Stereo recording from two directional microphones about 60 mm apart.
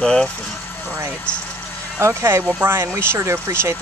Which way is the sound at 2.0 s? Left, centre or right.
Right.